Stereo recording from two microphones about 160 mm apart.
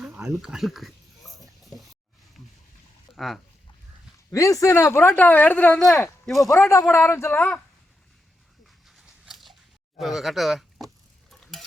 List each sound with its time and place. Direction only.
0.3 s speech: 5° right (ahead or behind)
3.2 s speech: centre (ahead or behind)
4.3 s speech: 20° left (ahead or behind); by 6.5 s centre (ahead or behind)
6.5 s a man's voice: 20° left (ahead or behind)
8.6 s dog: centre (ahead or behind)
10.0 s speech: centre (ahead or behind)